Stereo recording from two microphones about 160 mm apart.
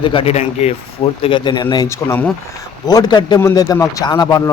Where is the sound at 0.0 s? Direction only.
35° left (ahead or behind).